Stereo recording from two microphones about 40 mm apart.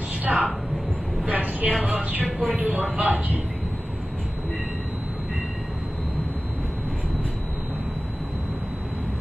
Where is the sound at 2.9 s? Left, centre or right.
Right.